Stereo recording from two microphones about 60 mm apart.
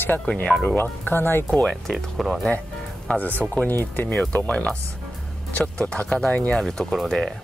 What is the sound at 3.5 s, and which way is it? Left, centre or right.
Speech, left.